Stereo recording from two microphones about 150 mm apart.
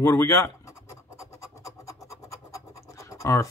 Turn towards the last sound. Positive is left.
turn(degrees=20)  # may be behind; listen again after turning